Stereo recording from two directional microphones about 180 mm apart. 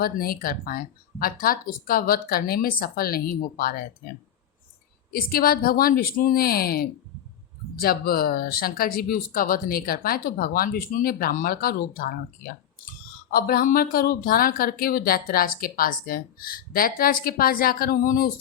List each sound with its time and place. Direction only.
0.0 s speech: 55° left (ahead or behind)
5.1 s speech: 55° left (ahead or behind)